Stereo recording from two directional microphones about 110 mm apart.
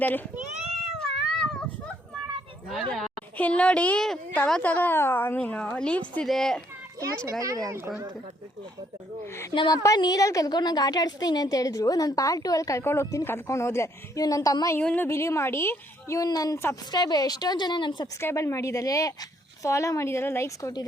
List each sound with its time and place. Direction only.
0.0 s a woman's voice: 15° left (ahead or behind)
0.9 s cat: 5° left (ahead or behind)
3.3 s a woman's voice: 10° left (ahead or behind)
7.3 s speech: 30° right (ahead or behind)
9.2 s speech: 25° left (ahead or behind)
9.6 s a woman's voice: 35° left (ahead or behind)
14.8 s a woman's voice: 15° left (ahead or behind); by 18.1 s 45° left (ahead or behind)
18.2 s speech: 25° left (ahead or behind)